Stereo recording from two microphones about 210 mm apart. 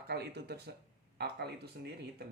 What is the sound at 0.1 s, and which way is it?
Speech, 50° right (ahead or behind).